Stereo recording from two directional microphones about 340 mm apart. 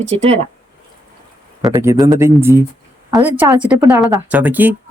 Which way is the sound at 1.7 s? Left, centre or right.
Centre.